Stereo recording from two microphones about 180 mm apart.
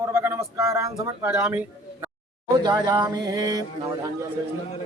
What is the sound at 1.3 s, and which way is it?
Speech, 5° right (ahead or behind).